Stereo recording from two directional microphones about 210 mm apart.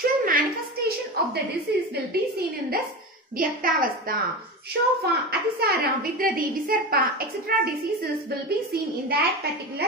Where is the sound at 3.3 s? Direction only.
40° right (ahead or behind).